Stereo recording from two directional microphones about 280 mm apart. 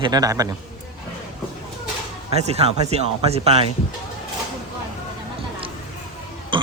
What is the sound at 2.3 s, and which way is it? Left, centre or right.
Speech, right.